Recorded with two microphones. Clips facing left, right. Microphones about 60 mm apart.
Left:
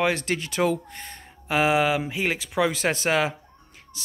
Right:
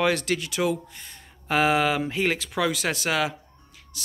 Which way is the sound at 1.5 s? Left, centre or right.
Centre.